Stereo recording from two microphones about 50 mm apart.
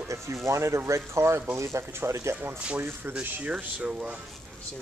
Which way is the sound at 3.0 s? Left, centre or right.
Right.